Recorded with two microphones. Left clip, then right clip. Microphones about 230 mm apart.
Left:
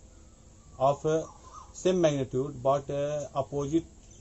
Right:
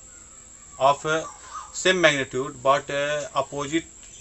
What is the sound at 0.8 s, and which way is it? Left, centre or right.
Speech, centre.